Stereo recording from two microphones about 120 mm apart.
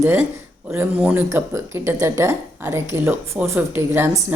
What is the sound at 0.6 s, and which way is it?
Speech, 15° right (ahead or behind).